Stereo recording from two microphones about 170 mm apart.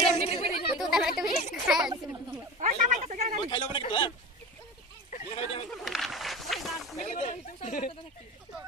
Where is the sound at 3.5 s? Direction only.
30° left (ahead or behind).